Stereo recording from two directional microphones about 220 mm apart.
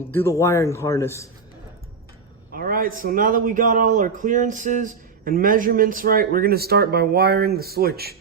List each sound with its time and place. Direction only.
0.1 s speech: 10° left (ahead or behind)
2.5 s a man's voice: 40° right (ahead or behind)